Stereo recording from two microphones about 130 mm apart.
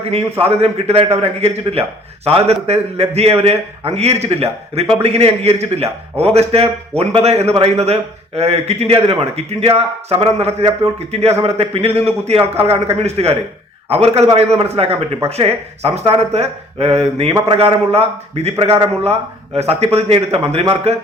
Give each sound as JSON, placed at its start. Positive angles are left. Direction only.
{"t": 0.1, "sound": "a man's voice", "side_deg": -50}